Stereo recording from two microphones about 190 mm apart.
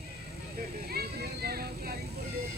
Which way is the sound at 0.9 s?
55° right (ahead or behind).